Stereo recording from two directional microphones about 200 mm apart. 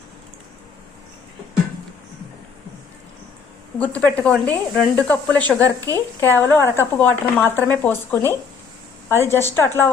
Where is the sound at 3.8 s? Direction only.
5° left (ahead or behind).